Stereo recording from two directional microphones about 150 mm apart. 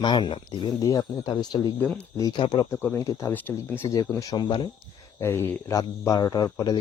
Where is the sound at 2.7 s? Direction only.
15° left (ahead or behind); by 4.7 s 35° left (ahead or behind).